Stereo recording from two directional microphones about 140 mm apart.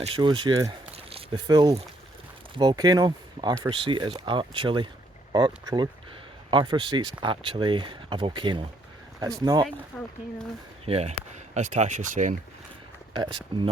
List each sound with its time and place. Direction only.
0.0 s speech: 35° right (ahead or behind)
0.9 s a sound: 45° right (ahead or behind)
1.5 s speech: 30° right (ahead or behind)
9.9 s speech: 10° left (ahead or behind)
10.8 s speech: 45° right (ahead or behind); by 12.4 s 65° right (ahead or behind)
13.1 s speech: 35° right (ahead or behind)